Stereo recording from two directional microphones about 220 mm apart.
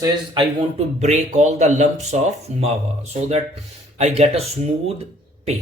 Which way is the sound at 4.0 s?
30° right (ahead or behind).